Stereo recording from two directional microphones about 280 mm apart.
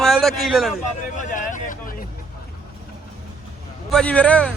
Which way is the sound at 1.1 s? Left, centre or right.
Left.